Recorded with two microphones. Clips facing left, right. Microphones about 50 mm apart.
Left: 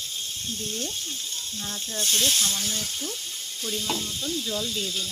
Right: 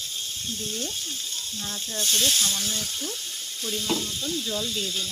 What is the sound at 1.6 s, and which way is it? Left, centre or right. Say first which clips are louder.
Sizzle: even; centre.